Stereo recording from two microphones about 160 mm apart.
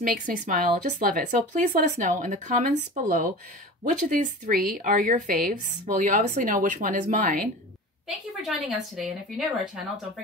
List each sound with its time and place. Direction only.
0.0 s speech: 60° right (ahead or behind)
8.4 s a woman's voice: centre (ahead or behind)